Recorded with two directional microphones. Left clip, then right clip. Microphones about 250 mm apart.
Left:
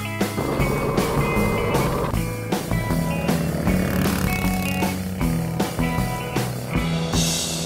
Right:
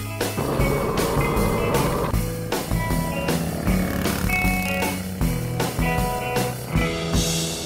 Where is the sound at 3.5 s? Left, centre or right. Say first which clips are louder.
Left 2 dB; centre.